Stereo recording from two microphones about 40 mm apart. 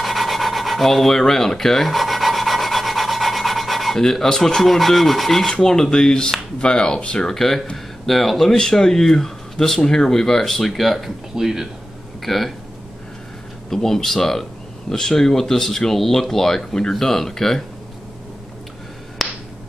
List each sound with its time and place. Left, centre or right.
0.0 s filing: centre
1.9 s rub: centre
4.0 s speech: centre
7.3 s speech: centre
11.3 s speech: centre
12.2 s speech: centre
13.7 s speech: centre
19.2 s finger snapping: centre